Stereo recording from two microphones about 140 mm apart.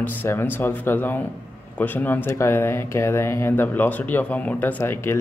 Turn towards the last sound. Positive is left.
turn(degrees=15)  # may be behind; listen again after turning